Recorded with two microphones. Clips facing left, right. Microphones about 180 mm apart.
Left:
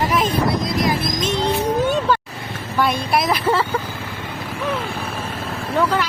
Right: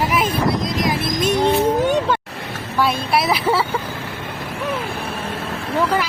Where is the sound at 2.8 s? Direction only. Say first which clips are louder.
Even; 5° right (ahead or behind).